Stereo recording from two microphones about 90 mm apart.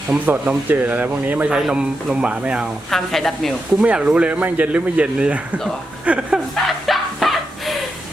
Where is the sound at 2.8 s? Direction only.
5° left (ahead or behind).